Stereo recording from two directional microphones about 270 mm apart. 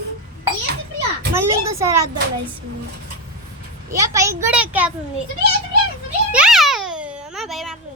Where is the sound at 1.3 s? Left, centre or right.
Centre.